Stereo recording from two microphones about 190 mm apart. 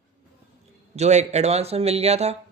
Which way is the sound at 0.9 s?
35° right (ahead or behind).